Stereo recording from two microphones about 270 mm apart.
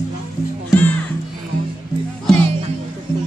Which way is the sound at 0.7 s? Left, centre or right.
Centre.